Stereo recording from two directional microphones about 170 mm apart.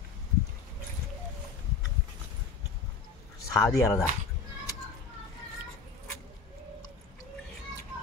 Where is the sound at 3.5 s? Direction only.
15° left (ahead or behind).